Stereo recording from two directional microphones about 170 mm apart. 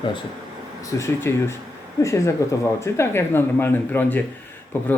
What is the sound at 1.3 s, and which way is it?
Speech, 15° left (ahead or behind).